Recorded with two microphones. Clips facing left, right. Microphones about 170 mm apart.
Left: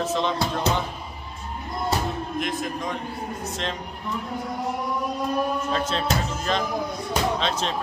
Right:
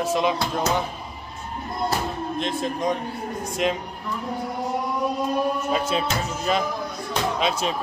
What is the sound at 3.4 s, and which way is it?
Speech, 10° right (ahead or behind).